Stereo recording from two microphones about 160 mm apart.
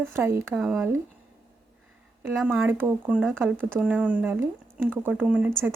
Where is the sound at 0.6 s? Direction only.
5° right (ahead or behind).